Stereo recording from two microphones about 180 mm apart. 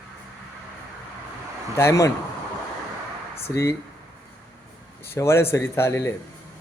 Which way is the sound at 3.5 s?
15° left (ahead or behind).